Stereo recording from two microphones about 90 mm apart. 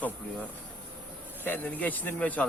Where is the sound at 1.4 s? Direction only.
20° left (ahead or behind).